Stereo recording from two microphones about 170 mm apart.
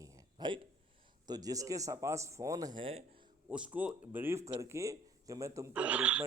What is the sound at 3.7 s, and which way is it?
Speech, 10° right (ahead or behind).